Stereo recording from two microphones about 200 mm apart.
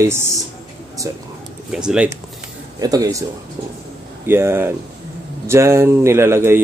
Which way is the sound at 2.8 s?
20° right (ahead or behind).